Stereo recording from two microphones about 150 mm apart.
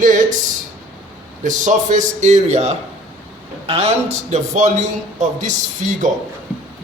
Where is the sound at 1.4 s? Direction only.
55° right (ahead or behind).